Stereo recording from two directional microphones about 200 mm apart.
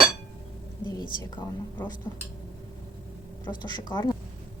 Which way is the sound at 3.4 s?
20° left (ahead or behind).